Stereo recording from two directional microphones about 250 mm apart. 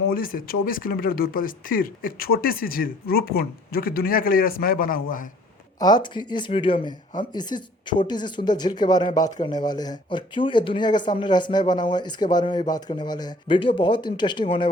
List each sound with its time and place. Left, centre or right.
0.1 s speech: left
5.8 s speech: centre